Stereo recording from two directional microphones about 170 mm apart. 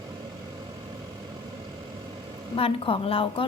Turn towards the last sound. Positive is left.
turn(degrees=30)  # may be behind; listen again after turning